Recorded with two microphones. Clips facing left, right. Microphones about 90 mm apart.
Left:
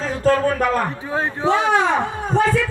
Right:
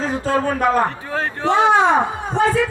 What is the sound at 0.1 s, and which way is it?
Speech, 20° right (ahead or behind).